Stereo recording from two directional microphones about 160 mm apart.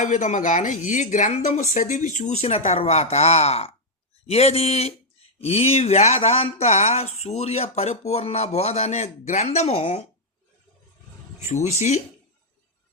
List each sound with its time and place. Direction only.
0.0 s a woman's voice: 50° left (ahead or behind)
11.4 s a woman's voice: 45° left (ahead or behind)